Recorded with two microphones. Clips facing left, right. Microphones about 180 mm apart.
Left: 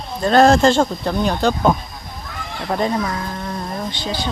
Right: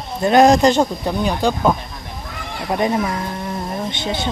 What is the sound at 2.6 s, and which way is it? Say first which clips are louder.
Speech: right 1 dB; 15° right (ahead or behind).